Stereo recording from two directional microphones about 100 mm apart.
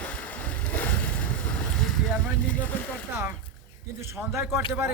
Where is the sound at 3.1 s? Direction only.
25° right (ahead or behind).